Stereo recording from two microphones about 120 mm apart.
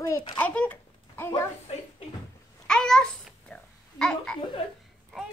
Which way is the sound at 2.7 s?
5° left (ahead or behind).